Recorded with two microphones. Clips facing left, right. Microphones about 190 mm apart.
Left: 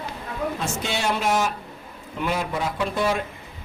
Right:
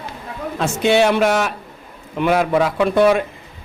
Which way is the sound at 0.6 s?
65° right (ahead or behind).